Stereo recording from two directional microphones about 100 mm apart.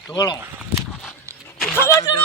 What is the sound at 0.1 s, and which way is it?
Speech, 40° left (ahead or behind).